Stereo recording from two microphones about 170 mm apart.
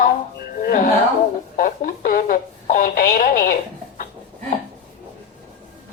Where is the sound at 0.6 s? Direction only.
55° left (ahead or behind).